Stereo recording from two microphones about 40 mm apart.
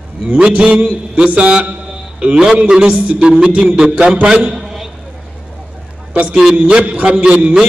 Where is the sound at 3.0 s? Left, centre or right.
Right.